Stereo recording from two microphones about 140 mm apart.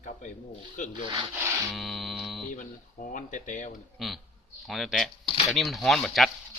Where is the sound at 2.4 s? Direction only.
70° left (ahead or behind).